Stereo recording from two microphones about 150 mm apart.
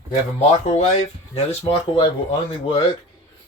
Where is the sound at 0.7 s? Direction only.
50° left (ahead or behind).